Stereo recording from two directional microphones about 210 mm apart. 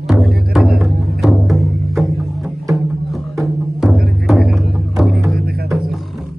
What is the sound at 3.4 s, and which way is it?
Music, centre (ahead or behind).